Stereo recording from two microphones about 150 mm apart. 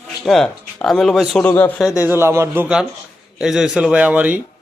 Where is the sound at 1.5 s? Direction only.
15° left (ahead or behind).